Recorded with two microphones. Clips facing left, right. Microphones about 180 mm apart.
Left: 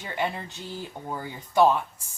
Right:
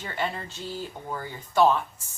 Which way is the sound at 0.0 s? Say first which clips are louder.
Left 1 dB; 15° left (ahead or behind).